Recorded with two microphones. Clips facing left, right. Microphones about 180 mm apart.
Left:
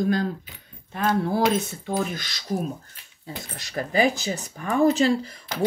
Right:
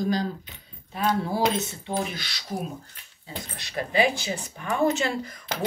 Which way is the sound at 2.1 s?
45° left (ahead or behind).